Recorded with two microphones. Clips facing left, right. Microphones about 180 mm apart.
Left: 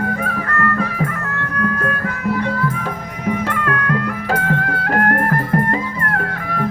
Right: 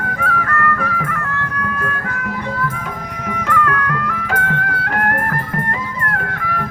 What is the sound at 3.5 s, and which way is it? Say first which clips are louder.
Music: right 1 dB; 25° left (ahead or behind).